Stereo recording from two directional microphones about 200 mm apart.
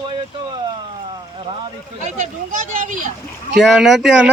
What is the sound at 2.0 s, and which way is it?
Speech, 40° right (ahead or behind).